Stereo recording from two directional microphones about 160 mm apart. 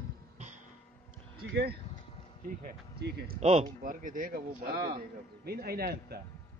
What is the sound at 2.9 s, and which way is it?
Speech, 90° right.